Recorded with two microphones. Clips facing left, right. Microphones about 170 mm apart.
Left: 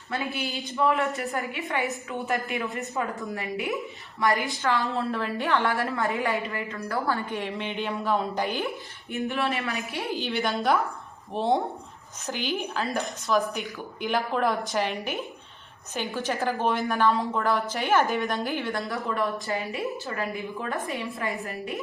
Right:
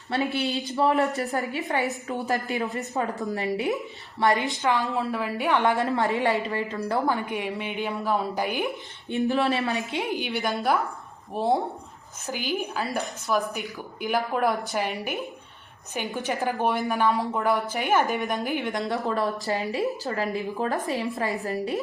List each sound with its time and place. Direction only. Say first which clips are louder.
0.1 s a woman's voice: right 5 dB; 30° right (ahead or behind)
4.6 s a woman's voice: even; 10° right (ahead or behind)
9.1 s a woman's voice: right 4 dB; 30° right (ahead or behind)
19.0 s a woman's voice: right 2 dB; 35° right (ahead or behind)